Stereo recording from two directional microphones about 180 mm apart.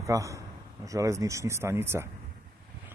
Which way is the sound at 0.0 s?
15° right (ahead or behind).